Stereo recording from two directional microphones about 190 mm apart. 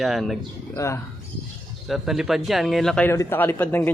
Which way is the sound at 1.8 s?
Centre (ahead or behind).